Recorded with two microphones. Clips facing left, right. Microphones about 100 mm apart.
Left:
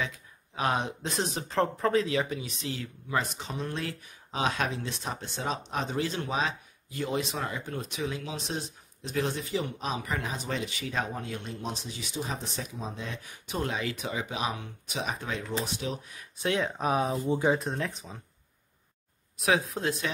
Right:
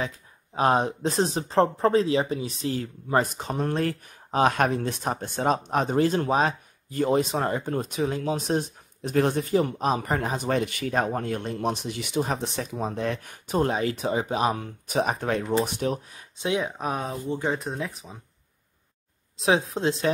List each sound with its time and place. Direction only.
0.6 s speech: 35° right (ahead or behind)
16.4 s speech: 10° right (ahead or behind)
16.8 s speech: centre (ahead or behind)
19.3 s speech: 25° right (ahead or behind)